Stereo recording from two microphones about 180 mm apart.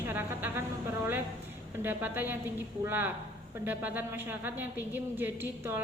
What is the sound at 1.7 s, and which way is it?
A woman's voice, 10° right (ahead or behind).